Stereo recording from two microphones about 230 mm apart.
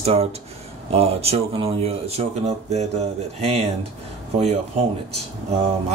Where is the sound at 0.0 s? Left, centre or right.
Right.